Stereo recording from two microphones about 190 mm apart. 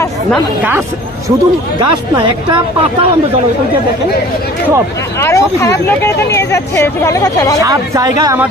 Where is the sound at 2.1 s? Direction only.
25° right (ahead or behind).